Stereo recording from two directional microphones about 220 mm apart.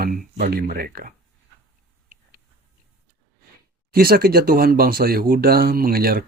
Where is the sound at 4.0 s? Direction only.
40° right (ahead or behind).